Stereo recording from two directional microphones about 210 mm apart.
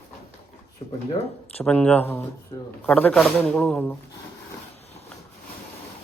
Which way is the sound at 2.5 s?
20° left (ahead or behind).